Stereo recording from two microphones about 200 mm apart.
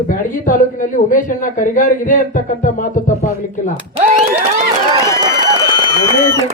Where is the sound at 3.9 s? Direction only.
35° right (ahead or behind).